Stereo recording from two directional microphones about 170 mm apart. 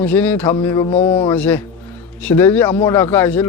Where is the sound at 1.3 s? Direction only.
10° left (ahead or behind).